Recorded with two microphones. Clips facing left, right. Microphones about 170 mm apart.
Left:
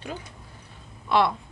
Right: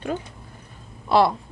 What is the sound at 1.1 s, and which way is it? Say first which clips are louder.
Speech: right 4 dB; 35° right (ahead or behind).